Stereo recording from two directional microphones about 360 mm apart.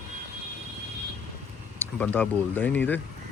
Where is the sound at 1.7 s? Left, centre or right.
Centre.